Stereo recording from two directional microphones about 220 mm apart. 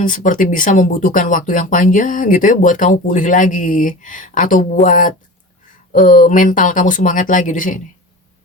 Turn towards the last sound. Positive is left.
turn(degrees=35)  # may be behind; listen again after turning